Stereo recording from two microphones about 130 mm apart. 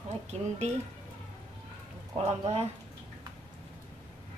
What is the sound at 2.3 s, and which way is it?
Speech, 55° right (ahead or behind).